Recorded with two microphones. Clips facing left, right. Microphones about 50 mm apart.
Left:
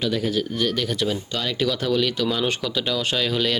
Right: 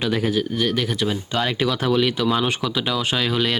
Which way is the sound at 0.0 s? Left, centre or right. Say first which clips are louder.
Right 2 dB; right.